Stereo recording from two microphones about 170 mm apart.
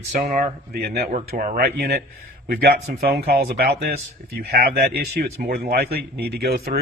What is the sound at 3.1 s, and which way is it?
Speech, 65° right (ahead or behind).